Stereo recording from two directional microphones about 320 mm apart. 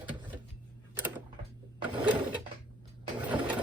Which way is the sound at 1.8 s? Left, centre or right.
Centre.